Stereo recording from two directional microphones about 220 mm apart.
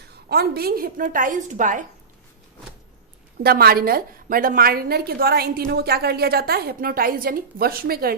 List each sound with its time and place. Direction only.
0.1 s a woman's voice: 45° right (ahead or behind)
3.4 s a woman's voice: 45° right (ahead or behind)